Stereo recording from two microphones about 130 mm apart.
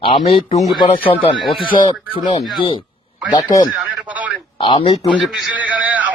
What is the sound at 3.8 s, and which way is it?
Radio, 10° right (ahead or behind).